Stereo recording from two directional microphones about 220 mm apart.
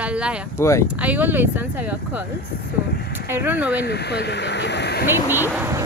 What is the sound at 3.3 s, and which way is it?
Speech, 5° right (ahead or behind).